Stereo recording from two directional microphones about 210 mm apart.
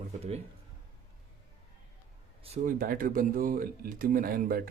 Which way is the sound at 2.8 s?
45° right (ahead or behind).